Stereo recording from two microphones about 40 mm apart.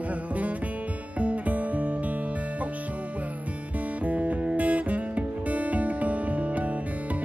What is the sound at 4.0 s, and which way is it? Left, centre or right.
Music, right.